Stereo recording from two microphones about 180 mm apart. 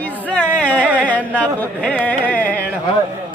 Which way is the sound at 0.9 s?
10° right (ahead or behind).